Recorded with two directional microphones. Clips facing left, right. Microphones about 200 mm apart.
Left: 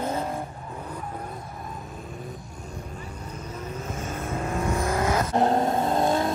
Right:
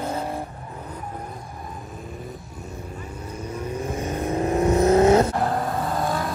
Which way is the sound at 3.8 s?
15° right (ahead or behind).